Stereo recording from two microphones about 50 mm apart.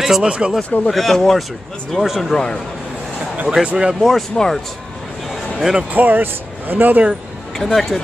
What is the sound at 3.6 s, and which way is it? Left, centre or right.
Speech, centre.